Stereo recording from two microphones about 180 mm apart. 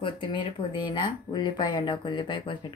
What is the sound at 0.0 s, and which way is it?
Speech, 25° left (ahead or behind).